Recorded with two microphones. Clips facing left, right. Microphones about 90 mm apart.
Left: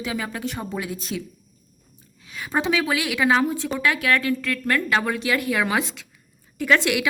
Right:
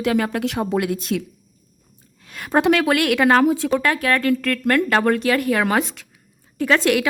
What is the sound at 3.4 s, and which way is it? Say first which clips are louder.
Speech: right 7 dB; 75° right (ahead or behind).